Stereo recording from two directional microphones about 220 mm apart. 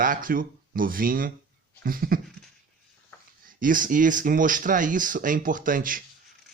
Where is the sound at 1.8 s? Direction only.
40° right (ahead or behind).